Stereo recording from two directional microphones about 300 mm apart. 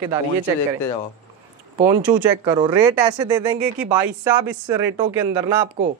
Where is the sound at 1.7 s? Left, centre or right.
Centre.